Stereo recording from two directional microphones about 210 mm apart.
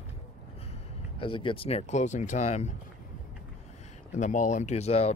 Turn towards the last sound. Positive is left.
turn(degrees=30)  # may be behind; listen again after turning